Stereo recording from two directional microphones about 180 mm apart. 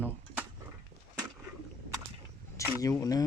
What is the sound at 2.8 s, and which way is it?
Speech, 20° left (ahead or behind).